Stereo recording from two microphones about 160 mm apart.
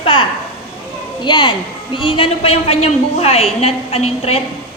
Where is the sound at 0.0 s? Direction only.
35° left (ahead or behind).